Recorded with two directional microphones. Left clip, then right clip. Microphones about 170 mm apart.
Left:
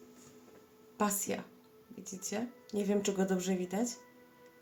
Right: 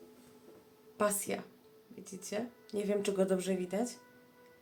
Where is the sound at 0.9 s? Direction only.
5° right (ahead or behind).